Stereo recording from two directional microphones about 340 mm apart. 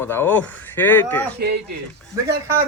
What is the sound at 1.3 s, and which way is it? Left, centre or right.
Speech, right.